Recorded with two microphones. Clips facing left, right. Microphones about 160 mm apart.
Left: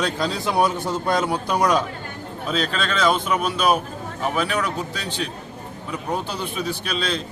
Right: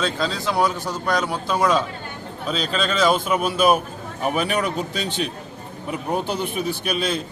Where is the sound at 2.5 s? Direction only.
Centre (ahead or behind); by 5.3 s 15° right (ahead or behind).